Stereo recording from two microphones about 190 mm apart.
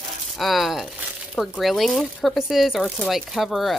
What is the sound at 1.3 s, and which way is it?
Speech, centre (ahead or behind).